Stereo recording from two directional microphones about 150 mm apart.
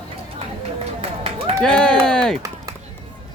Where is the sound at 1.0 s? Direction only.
40° right (ahead or behind).